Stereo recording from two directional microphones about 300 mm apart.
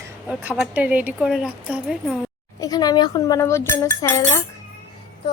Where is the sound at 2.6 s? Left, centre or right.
Centre.